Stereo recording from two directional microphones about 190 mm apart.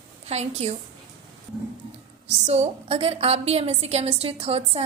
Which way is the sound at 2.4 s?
35° right (ahead or behind).